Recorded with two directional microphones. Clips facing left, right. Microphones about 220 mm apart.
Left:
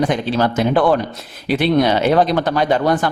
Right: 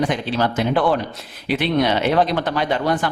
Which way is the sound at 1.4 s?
40° left (ahead or behind).